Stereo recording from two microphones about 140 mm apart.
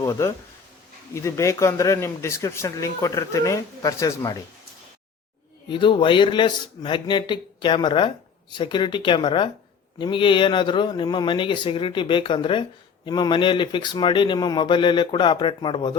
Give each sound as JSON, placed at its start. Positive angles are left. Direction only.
{"t": 0.0, "sound": "speech", "side_deg": 20}
{"t": 5.6, "sound": "a man's voice", "side_deg": 35}